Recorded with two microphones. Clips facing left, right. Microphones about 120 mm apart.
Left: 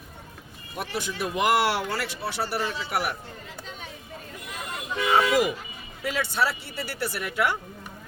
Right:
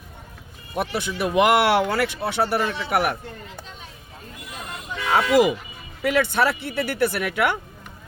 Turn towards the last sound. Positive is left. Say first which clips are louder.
# right 4 dB
turn(degrees=-65)  # may be behind; listen again after turning